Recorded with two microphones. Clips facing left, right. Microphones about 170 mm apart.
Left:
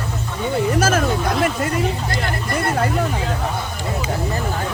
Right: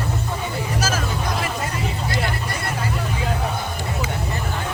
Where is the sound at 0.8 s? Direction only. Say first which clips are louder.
Left 6 dB; 55° left (ahead or behind).